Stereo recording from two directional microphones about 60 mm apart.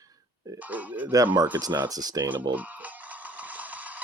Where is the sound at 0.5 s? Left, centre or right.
Right.